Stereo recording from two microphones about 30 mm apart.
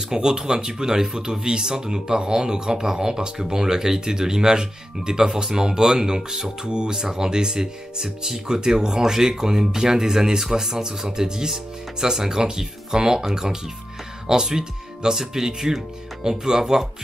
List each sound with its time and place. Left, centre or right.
0.1 s speech: right